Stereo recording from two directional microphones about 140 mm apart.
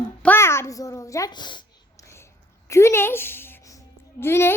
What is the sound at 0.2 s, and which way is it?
A woman's voice, 15° left (ahead or behind).